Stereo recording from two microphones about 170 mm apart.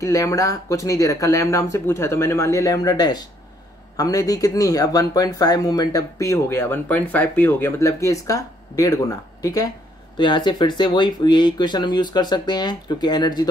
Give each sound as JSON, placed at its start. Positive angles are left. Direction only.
{"t": 0.0, "sound": "speech", "side_deg": 20}